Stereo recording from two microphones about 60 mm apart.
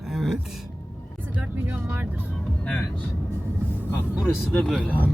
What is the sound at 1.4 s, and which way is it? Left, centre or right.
Speech, right.